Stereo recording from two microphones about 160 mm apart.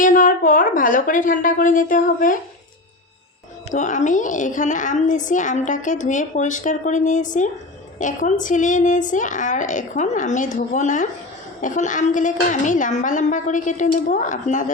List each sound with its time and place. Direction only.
0.0 s a woman's voice: 55° left (ahead or behind)
3.7 s a child's voice: 50° left (ahead or behind)